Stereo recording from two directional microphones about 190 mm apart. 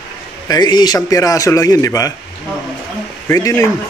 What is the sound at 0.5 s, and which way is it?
A man's voice, 20° left (ahead or behind).